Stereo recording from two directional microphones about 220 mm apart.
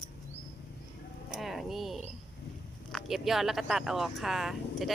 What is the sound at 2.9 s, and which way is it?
Speech, centre (ahead or behind).